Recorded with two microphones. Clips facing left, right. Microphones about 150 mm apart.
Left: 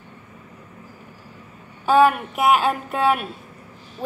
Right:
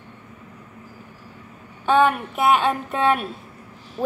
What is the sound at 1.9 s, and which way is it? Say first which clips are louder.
A woman's voice: left 2 dB; 5° left (ahead or behind).